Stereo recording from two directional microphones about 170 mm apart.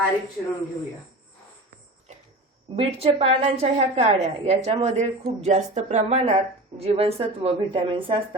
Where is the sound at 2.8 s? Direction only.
35° right (ahead or behind).